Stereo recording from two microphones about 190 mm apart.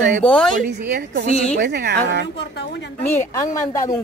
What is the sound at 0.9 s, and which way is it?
A woman's voice, 55° right (ahead or behind).